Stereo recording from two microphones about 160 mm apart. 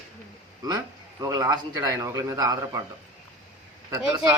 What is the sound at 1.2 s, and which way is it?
A man's voice, 20° right (ahead or behind).